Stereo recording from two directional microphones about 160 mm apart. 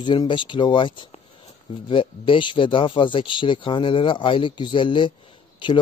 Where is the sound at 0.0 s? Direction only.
30° left (ahead or behind).